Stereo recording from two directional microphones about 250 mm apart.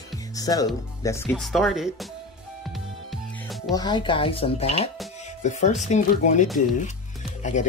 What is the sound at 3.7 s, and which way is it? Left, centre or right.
Speech, centre.